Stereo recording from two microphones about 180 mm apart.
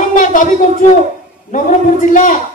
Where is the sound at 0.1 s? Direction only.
45° left (ahead or behind).